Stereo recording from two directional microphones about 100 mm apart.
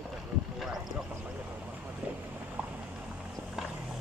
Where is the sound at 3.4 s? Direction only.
10° right (ahead or behind).